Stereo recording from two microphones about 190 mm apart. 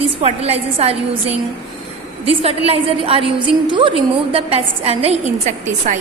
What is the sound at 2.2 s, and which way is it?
A woman's voice, 30° right (ahead or behind).